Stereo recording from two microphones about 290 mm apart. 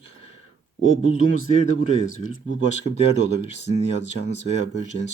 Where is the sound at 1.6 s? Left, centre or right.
Left.